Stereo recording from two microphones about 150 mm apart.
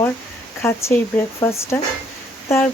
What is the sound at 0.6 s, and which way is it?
Speech, 20° left (ahead or behind).